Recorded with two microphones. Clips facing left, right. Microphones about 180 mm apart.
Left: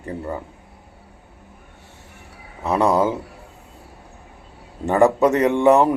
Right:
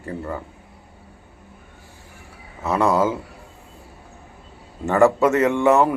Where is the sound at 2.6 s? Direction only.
15° left (ahead or behind).